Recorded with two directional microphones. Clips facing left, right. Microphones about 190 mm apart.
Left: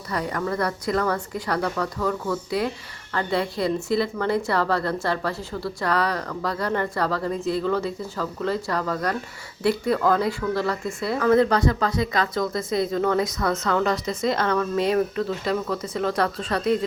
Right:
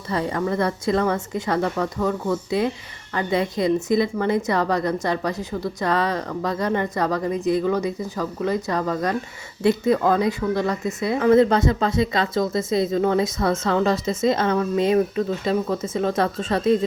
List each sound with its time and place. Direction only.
0.1 s a woman's voice: 25° right (ahead or behind)